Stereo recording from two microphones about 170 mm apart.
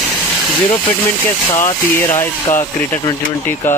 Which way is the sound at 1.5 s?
15° left (ahead or behind).